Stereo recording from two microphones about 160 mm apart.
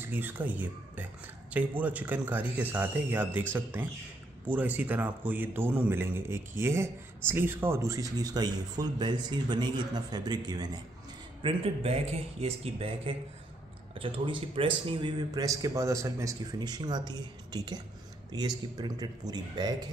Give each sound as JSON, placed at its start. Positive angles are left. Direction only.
{"t": 0.0, "sound": "a man's voice", "side_deg": -10}
{"t": 11.4, "sound": "speech", "side_deg": -35}